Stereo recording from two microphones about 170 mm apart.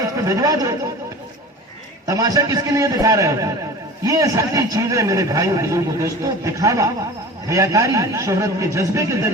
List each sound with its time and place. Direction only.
0.2 s a man's voice: 20° right (ahead or behind)
2.0 s a man's voice: 20° right (ahead or behind)